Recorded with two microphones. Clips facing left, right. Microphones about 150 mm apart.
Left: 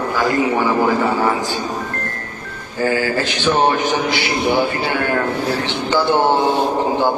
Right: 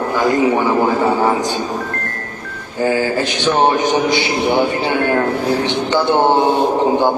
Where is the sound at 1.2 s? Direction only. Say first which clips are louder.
Right 3 dB; 20° right (ahead or behind).